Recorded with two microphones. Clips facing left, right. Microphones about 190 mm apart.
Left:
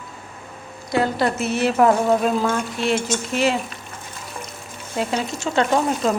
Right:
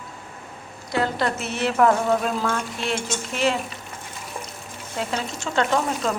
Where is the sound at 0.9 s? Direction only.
10° left (ahead or behind).